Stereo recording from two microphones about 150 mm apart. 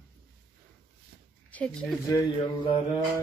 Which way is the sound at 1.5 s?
10° left (ahead or behind).